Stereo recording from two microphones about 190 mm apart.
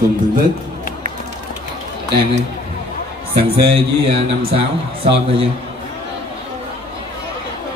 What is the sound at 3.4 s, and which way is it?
Speech, 30° right (ahead or behind).